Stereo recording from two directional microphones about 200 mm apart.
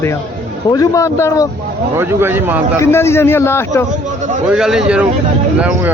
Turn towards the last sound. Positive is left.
turn(degrees=-5)  # may be behind; listen again after turning